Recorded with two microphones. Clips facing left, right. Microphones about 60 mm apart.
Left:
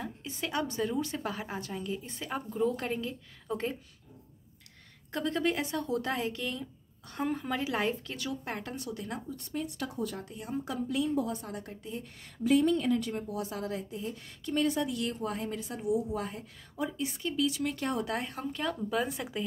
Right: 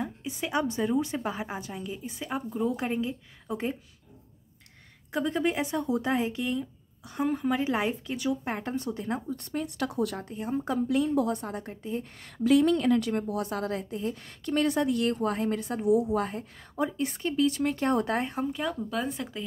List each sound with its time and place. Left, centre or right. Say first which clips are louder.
0.0 s a woman's voice: right 4 dB; centre
5.1 s a woman's voice: right 3 dB; centre
7.1 s a woman's voice: right 5 dB; centre; by 9.2 s right
9.3 s speech: right 4 dB; right
9.8 s speech: right 6 dB; right
10.1 s speech: right 5 dB; right
10.9 s a woman's voice: right 4 dB; right
11.4 s speech: right 5 dB; right
12.2 s a woman's voice: right 3 dB; right
16.3 s speech: right 5 dB; right
18.3 s speech: right 4 dB; centre